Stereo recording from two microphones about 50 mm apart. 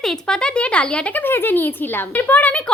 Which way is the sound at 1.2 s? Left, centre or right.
Left.